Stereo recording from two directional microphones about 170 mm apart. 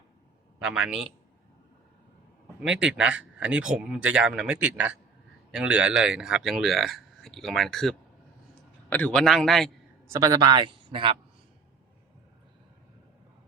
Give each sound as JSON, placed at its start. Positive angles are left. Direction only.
{"t": 0.6, "sound": "speech", "side_deg": -5}
{"t": 2.6, "sound": "speech", "side_deg": -5}
{"t": 10.1, "sound": "a man's voice", "side_deg": -20}